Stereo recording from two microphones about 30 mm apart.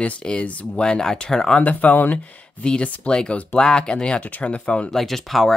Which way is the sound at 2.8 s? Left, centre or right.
Left.